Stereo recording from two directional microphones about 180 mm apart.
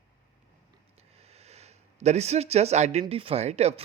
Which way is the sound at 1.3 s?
35° right (ahead or behind).